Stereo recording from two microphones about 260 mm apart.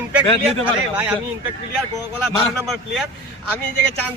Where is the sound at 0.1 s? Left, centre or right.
Centre.